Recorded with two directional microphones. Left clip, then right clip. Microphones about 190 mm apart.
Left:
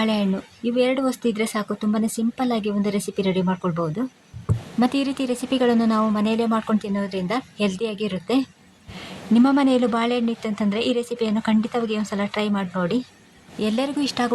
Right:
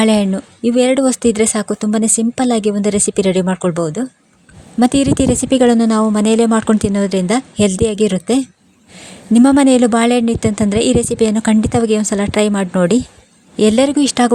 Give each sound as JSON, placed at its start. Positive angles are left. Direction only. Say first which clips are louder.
{"t": 0.0, "sound": "a woman's voice", "louder": "right 9 dB", "side_deg": -50}